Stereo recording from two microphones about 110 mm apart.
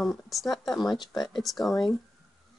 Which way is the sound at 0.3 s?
Centre (ahead or behind).